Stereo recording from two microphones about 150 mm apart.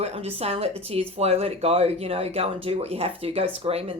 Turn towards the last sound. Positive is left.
turn(degrees=-40)  # may be behind; listen again after turning